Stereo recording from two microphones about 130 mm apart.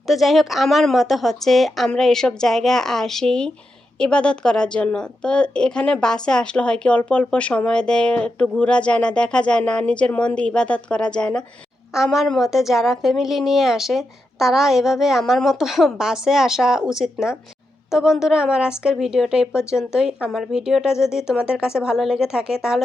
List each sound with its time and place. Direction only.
0.1 s a woman's voice: centre (ahead or behind)